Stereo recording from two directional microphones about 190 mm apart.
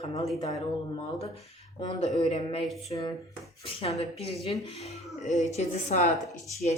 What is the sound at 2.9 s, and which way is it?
Speech, 30° left (ahead or behind).